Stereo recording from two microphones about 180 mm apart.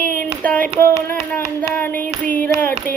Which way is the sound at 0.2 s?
10° left (ahead or behind).